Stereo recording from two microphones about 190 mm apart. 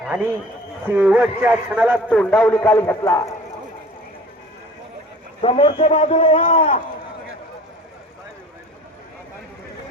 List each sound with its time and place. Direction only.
0.9 s a man's voice: 5° right (ahead or behind)
2.0 s a man's voice: 5° left (ahead or behind)
5.4 s a man's voice: 30° left (ahead or behind)